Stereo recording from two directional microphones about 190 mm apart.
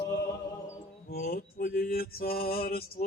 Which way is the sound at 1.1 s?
50° left (ahead or behind).